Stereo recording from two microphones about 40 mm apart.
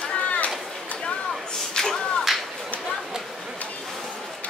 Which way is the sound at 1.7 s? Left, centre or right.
Centre.